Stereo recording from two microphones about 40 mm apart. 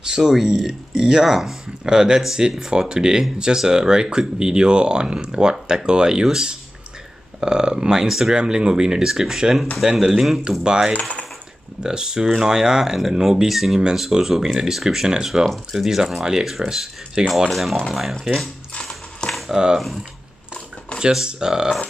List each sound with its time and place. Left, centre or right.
0.0 s speech: centre
7.3 s speech: centre
10.9 s coin: left
11.8 s speech: centre
15.4 s speech: centre
15.8 s speech: centre
17.5 s speech: centre
19.5 s speech: centre
21.1 s speech: centre